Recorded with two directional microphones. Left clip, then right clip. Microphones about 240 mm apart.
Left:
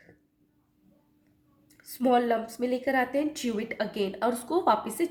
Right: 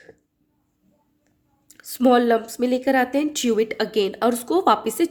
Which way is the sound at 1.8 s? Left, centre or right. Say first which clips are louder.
Right 7 dB; right.